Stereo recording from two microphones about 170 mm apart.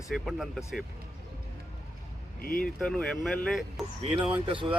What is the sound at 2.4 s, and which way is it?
Speech, 55° left (ahead or behind).